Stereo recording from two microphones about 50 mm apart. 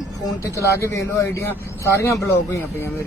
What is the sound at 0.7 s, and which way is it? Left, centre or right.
Speech, left.